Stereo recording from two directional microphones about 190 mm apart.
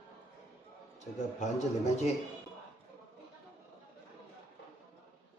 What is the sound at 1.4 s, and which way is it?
Speech, 35° left (ahead or behind).